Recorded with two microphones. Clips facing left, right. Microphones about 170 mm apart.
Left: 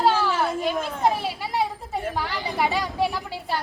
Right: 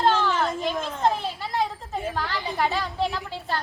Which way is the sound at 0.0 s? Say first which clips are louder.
Left 1 dB; 5° left (ahead or behind).